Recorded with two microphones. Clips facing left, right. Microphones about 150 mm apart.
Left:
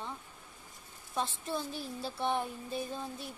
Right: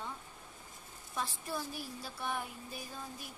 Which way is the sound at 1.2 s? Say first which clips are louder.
Left 4 dB; 25° left (ahead or behind).